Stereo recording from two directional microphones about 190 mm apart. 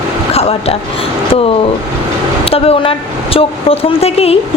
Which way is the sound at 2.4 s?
30° left (ahead or behind).